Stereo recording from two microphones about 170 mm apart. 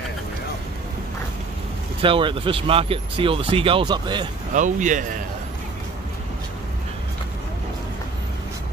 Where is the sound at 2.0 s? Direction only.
30° right (ahead or behind).